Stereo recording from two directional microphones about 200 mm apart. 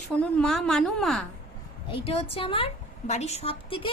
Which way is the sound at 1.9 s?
30° left (ahead or behind).